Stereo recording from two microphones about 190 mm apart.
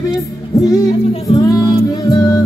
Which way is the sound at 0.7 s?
20° left (ahead or behind).